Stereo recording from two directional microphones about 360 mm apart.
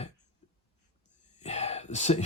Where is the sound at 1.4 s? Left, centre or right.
Centre.